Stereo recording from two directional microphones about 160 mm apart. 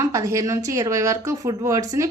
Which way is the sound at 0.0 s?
20° right (ahead or behind).